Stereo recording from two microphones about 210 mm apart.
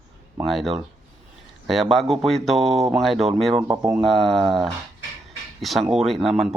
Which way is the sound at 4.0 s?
Centre (ahead or behind).